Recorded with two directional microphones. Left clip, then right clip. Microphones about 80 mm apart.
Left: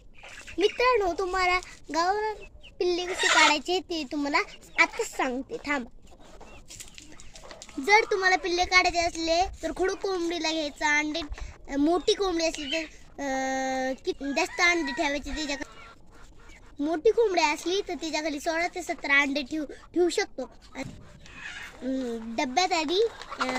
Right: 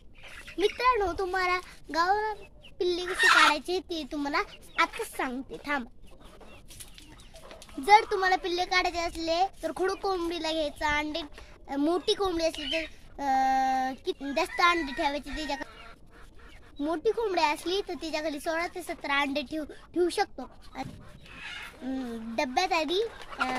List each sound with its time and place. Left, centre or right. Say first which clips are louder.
0.8 s speech: left 2 dB; right
3.5 s speech: left 3 dB; right
7.9 s speech: even; right
16.8 s speech: left 5 dB; right
22.4 s speech: left 1 dB; right